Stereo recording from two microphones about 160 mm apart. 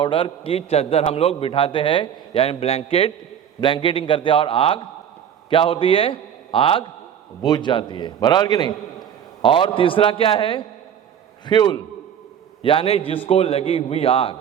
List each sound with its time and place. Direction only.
0.0 s a man's voice: 35° left (ahead or behind)